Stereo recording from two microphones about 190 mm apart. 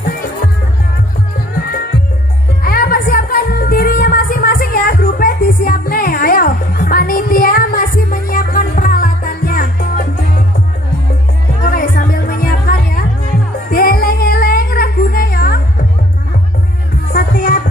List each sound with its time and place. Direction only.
2.6 s music: 50° left (ahead or behind)
11.6 s music: 50° left (ahead or behind)
17.1 s music: 50° left (ahead or behind)